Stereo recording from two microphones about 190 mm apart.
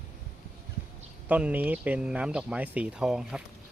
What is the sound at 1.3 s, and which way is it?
Speech, 10° right (ahead or behind).